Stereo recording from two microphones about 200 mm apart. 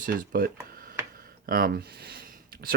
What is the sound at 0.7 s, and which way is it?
Tick-tock, 45° right (ahead or behind).